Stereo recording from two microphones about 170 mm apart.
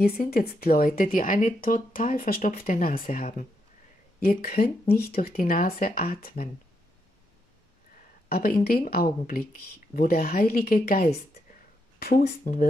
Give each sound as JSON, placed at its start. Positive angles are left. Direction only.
{"t": 0.0, "sound": "speech", "side_deg": 65}
{"t": 8.3, "sound": "speech", "side_deg": 60}
{"t": 12.2, "sound": "speech", "side_deg": 55}